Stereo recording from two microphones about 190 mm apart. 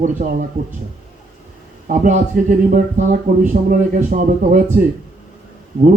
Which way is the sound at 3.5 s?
45° right (ahead or behind).